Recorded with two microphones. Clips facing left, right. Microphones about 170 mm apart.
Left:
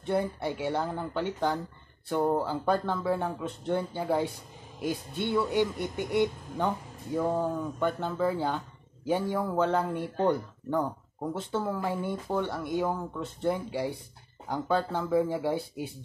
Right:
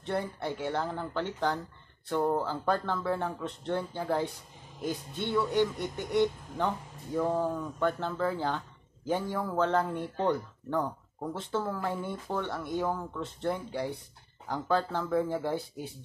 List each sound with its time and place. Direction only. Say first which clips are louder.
0.0 s speech: left 4 dB; 5° left (ahead or behind)